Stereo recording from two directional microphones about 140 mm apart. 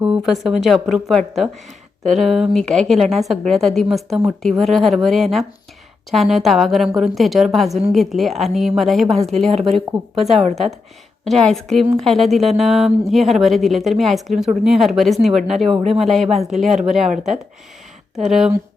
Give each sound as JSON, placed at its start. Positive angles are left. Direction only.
{"t": 0.0, "sound": "speech", "side_deg": -5}
{"t": 9.5, "sound": "speech", "side_deg": -50}
{"t": 9.7, "sound": "speech", "side_deg": 0}
{"t": 10.4, "sound": "speech", "side_deg": -50}
{"t": 11.3, "sound": "speech", "side_deg": 5}